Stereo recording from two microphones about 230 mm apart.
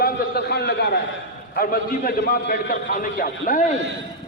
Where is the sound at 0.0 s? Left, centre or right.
Left.